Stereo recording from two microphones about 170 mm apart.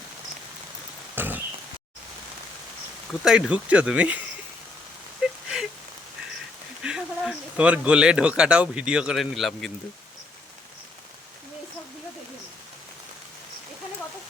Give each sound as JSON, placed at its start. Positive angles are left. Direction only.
{"t": 1.1, "sound": "a sound", "side_deg": -10}
{"t": 3.1, "sound": "speech", "side_deg": 0}
{"t": 6.8, "sound": "speech", "side_deg": -5}